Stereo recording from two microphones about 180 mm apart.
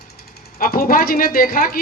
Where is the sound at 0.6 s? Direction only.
55° left (ahead or behind).